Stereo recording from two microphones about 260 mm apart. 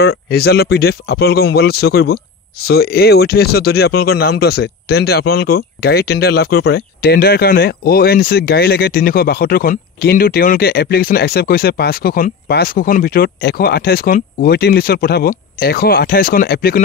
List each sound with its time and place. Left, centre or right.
0.0 s speech: left